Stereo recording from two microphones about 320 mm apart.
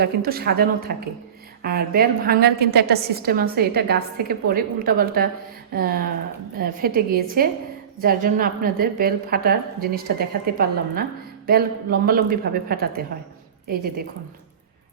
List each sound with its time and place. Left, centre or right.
0.0 s a woman's voice: right